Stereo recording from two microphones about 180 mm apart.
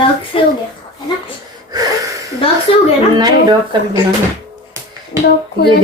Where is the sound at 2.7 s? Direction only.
35° left (ahead or behind).